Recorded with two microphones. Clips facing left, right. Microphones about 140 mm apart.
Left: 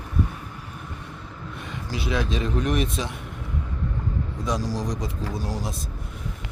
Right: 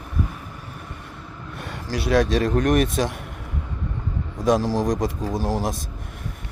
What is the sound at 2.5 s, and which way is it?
Speech, 50° right (ahead or behind).